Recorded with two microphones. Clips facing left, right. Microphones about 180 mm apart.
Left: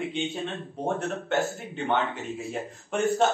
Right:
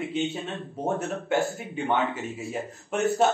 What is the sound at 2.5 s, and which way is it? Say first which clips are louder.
Speech: right 1 dB; 5° right (ahead or behind).